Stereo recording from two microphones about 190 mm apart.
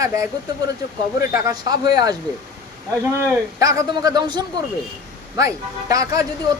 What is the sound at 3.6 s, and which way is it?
Speech, 20° right (ahead or behind).